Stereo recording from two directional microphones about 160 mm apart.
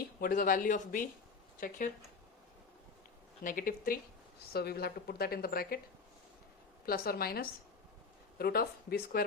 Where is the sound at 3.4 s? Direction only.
60° left (ahead or behind).